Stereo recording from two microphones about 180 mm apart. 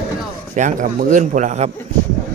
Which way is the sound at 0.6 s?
45° right (ahead or behind).